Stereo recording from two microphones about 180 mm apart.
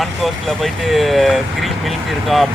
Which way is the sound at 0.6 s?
Centre (ahead or behind).